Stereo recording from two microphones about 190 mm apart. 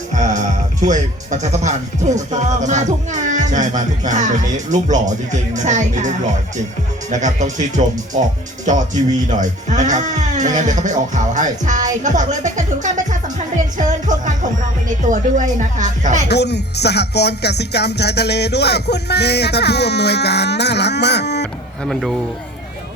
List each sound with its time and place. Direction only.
0.1 s speech: 40° right (ahead or behind)
9.2 s speech: 40° right (ahead or behind)
13.7 s music: 40° right (ahead or behind)
15.0 s speech: 40° right (ahead or behind)
16.3 s speech: 60° left (ahead or behind)